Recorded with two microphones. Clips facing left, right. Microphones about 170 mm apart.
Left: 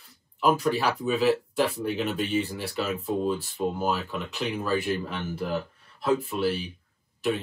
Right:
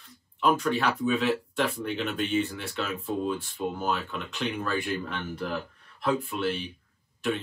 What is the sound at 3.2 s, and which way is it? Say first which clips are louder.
Speech: left 3 dB; 5° left (ahead or behind).